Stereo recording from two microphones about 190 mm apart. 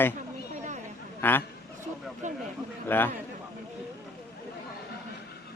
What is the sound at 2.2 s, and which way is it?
Speech, 40° right (ahead or behind).